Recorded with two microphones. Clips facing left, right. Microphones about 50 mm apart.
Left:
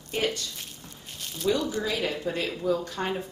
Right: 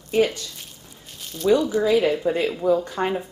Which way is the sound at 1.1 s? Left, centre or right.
Centre.